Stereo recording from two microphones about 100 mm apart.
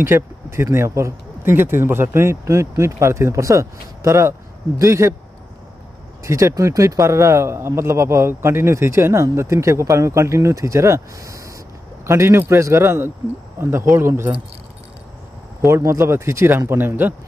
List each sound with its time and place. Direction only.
0.0 s a man's voice: 25° right (ahead or behind)
6.2 s a man's voice: 30° right (ahead or behind)
15.6 s a man's voice: 30° right (ahead or behind)